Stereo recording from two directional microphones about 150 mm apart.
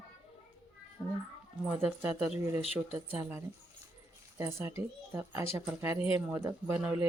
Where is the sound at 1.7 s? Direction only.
15° right (ahead or behind).